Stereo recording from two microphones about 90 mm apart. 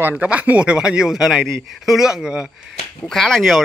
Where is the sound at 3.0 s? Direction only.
5° left (ahead or behind).